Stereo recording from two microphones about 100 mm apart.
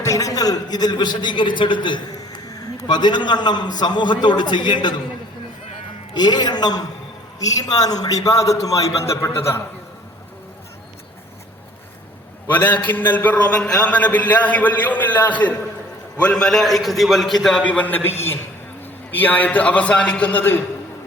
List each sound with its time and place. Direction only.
0.0 s a man's voice: 35° left (ahead or behind); by 2.0 s 55° left (ahead or behind)
2.4 s a man's voice: 40° left (ahead or behind)
6.1 s a man's voice: 45° left (ahead or behind); by 9.6 s 25° left (ahead or behind)
12.5 s a man's voice: 20° left (ahead or behind)
16.3 s a man's voice: 5° left (ahead or behind)
17.6 s a man's voice: 15° left (ahead or behind)
19.1 s a man's voice: 15° left (ahead or behind)